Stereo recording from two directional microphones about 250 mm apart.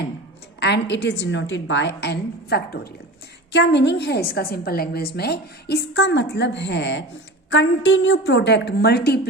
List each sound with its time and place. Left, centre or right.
0.6 s a woman's voice: left